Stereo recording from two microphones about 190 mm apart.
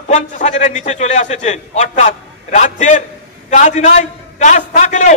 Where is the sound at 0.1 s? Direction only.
40° left (ahead or behind).